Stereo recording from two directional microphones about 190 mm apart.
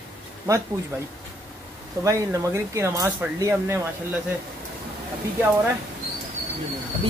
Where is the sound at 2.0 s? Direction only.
15° right (ahead or behind).